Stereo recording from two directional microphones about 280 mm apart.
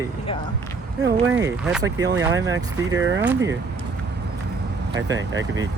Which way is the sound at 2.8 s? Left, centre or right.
Right.